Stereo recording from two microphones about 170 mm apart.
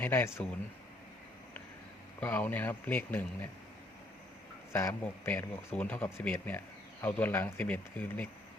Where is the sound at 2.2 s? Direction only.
10° left (ahead or behind).